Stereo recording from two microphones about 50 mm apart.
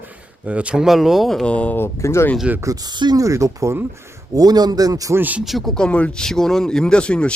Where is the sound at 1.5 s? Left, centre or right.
Left.